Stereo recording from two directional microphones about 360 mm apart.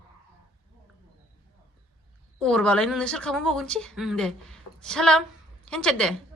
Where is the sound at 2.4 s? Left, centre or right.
Centre.